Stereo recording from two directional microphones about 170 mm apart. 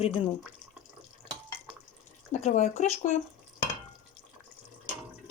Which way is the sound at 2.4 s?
40° left (ahead or behind).